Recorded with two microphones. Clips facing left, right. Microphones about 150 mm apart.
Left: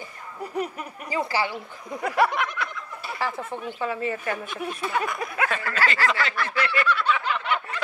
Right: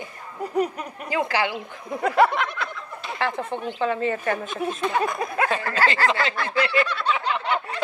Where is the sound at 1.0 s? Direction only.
55° right (ahead or behind).